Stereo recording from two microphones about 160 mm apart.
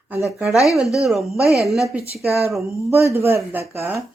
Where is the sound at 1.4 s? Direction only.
20° left (ahead or behind).